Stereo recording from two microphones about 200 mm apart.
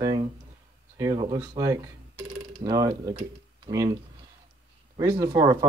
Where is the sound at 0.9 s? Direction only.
20° right (ahead or behind).